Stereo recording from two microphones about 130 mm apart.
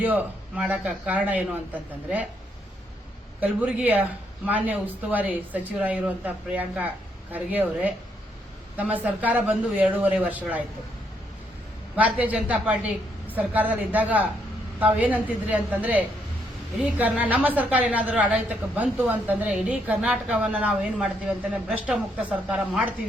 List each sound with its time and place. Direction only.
0.0 s a woman's voice: 10° right (ahead or behind)
3.4 s a woman's voice: 10° right (ahead or behind)
11.9 s a woman's voice: 10° right (ahead or behind)
22.4 s a woman's voice: 5° right (ahead or behind)